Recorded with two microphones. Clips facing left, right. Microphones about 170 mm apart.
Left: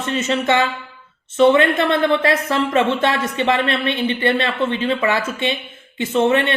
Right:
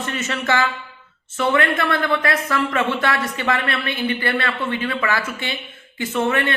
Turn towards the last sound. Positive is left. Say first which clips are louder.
# left 4 dB
turn(degrees=20)  # may be behind; listen again after turning